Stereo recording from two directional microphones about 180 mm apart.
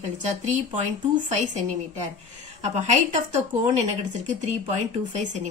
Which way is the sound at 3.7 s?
40° right (ahead or behind).